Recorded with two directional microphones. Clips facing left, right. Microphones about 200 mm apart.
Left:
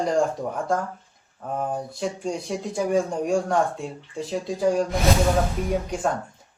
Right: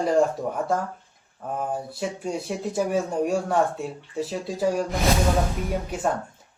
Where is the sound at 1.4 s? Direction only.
5° right (ahead or behind).